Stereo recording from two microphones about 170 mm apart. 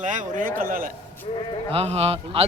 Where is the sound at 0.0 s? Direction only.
50° right (ahead or behind).